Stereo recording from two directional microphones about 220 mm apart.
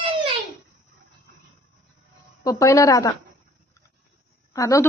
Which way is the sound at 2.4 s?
15° left (ahead or behind).